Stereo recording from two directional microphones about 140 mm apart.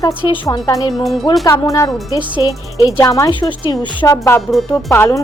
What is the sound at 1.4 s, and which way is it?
A woman's voice, 25° left (ahead or behind).